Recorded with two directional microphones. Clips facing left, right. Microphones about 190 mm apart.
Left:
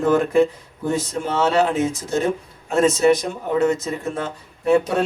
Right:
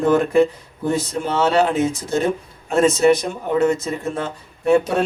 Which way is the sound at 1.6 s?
30° right (ahead or behind).